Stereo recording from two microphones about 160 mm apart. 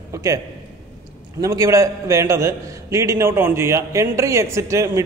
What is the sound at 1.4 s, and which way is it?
A man's voice, 20° right (ahead or behind).